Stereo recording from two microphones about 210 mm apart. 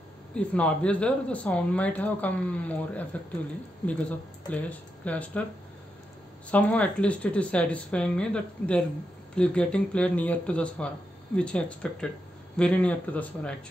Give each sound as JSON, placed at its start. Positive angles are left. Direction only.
{"t": 0.3, "sound": "speech", "side_deg": 5}
{"t": 4.5, "sound": "speech", "side_deg": 5}
{"t": 6.5, "sound": "speech", "side_deg": 5}